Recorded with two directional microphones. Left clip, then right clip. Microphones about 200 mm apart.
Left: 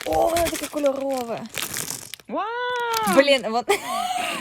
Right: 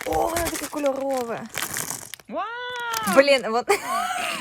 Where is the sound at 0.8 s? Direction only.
10° left (ahead or behind).